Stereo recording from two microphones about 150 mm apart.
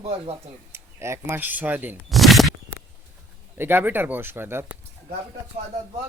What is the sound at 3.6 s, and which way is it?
Speech, 15° right (ahead or behind).